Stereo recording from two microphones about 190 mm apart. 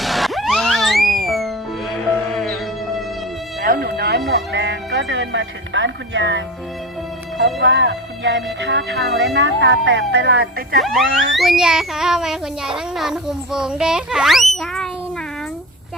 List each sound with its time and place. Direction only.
0.0 s music: centre (ahead or behind)
3.6 s music: 50° right (ahead or behind); by 6.4 s 75° right (ahead or behind)
7.6 s speech: 65° right (ahead or behind)
10.8 s music: centre (ahead or behind)